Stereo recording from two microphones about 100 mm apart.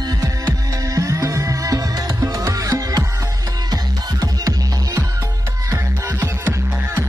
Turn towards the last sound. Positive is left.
turn(degrees=-25)  # may be behind; listen again after turning